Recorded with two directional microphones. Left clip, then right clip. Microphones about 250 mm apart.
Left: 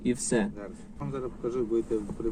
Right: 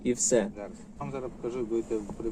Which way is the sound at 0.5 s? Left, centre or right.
Centre.